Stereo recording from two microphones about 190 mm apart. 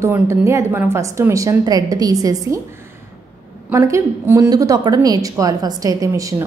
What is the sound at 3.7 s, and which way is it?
A woman's voice, 15° right (ahead or behind).